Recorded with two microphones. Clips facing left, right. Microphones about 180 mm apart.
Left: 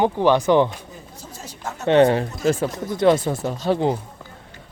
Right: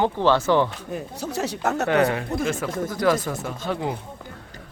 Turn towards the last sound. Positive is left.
turn(degrees=30)  # may be behind; listen again after turning